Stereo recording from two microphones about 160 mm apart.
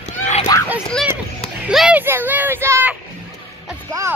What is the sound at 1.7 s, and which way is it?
Speech, 5° right (ahead or behind).